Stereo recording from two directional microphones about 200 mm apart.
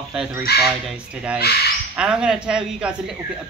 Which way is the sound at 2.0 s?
5° right (ahead or behind).